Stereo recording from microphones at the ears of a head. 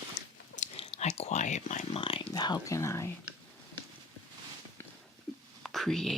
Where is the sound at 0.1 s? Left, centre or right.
Left.